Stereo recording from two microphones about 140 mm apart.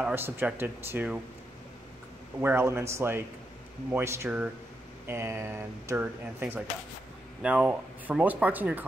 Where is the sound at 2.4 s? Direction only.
20° right (ahead or behind).